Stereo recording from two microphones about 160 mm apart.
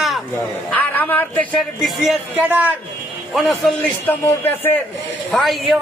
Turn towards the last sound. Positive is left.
turn(degrees=0)  # may be behind; listen again after turning